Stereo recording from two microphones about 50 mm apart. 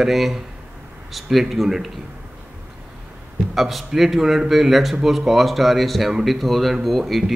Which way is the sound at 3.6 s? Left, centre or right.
Centre.